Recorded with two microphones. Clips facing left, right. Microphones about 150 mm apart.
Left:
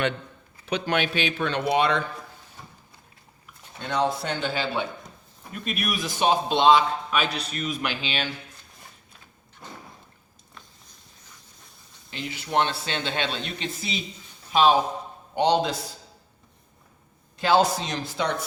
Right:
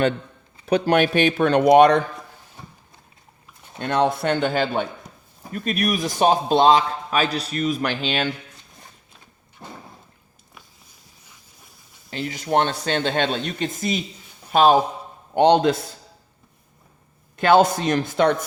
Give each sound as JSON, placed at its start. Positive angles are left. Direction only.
{"t": 0.6, "sound": "speech", "side_deg": -40}
{"t": 3.8, "sound": "a man's voice", "side_deg": -60}
{"t": 9.6, "sound": "a sound", "side_deg": -30}
{"t": 12.1, "sound": "speech", "side_deg": -45}
{"t": 17.3, "sound": "speech", "side_deg": -55}